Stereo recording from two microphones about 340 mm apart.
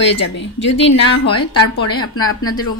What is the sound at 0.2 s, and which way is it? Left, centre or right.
Speech, left.